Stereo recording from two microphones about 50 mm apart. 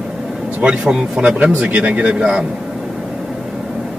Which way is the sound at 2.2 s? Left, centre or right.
Centre.